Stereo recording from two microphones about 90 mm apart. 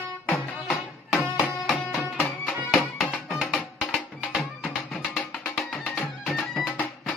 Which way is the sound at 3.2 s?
Centre (ahead or behind).